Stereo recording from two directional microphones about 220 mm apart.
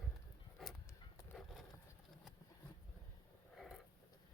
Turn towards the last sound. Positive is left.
turn(degrees=0)  # may be behind; listen again after turning